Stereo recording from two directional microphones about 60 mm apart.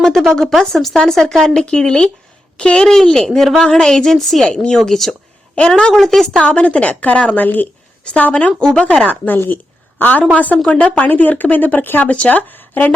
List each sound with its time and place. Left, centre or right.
0.0 s a woman's voice: centre
4.4 s a woman's voice: centre
4.8 s a woman's voice: centre
5.9 s a woman's voice: centre
6.4 s speech: centre
8.6 s a woman's voice: centre
8.9 s speech: left